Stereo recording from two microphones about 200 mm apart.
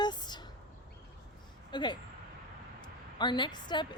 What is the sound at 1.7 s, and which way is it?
Speech, 20° left (ahead or behind).